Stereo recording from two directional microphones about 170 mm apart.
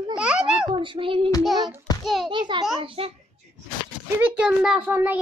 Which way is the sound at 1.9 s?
25° left (ahead or behind).